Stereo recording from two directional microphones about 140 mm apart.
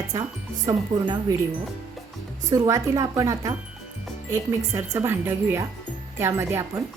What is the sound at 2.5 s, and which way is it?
A woman's voice, 25° right (ahead or behind).